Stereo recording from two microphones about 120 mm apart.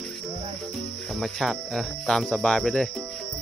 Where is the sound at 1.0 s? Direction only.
Centre (ahead or behind).